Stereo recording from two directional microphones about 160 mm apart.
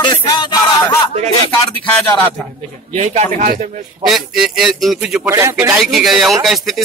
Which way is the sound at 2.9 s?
45° right (ahead or behind).